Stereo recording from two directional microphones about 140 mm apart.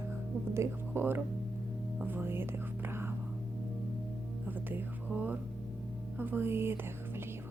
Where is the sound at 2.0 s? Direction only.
15° right (ahead or behind).